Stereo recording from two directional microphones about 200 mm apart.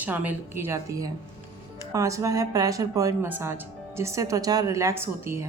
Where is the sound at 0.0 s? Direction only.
10° right (ahead or behind).